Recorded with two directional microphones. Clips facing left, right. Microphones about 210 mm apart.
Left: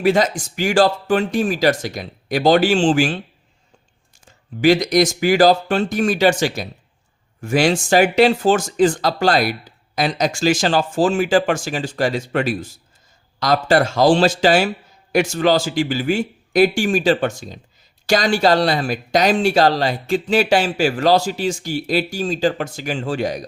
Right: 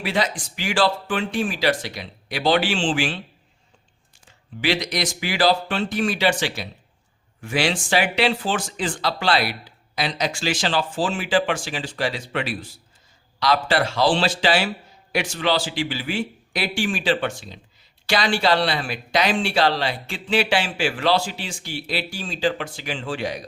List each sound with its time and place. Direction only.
0.0 s speech: 45° left (ahead or behind)
4.3 s speech: 45° left (ahead or behind)